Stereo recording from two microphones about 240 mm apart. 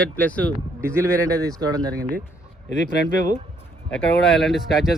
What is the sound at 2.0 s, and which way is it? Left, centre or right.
Speech, right.